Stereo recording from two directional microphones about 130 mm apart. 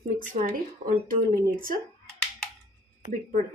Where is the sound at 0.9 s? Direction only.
90° right.